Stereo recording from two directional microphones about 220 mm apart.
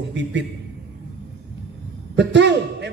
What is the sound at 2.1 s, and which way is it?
Speech, 55° right (ahead or behind).